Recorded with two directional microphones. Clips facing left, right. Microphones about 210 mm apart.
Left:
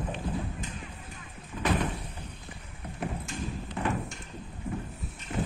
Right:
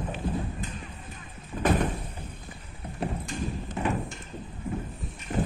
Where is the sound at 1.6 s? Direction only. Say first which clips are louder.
Right 4 dB; 50° right (ahead or behind).